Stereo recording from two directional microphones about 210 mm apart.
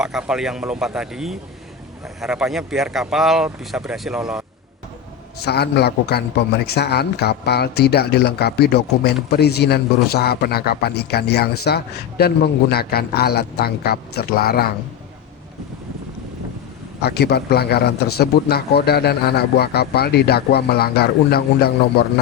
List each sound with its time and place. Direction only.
0.0 s speech: 5° right (ahead or behind)
5.5 s a man's voice: 50° left (ahead or behind)
17.0 s a man's voice: 50° left (ahead or behind)